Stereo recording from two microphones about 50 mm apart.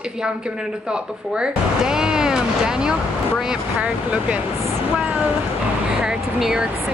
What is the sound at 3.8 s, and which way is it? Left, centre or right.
Speech, right.